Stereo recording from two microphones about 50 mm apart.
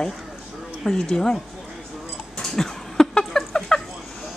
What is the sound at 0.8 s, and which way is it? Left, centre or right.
Speech, centre.